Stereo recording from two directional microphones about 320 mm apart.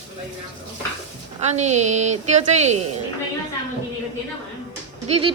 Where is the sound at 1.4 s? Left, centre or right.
Right.